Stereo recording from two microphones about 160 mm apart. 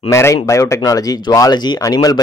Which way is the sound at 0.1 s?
20° left (ahead or behind).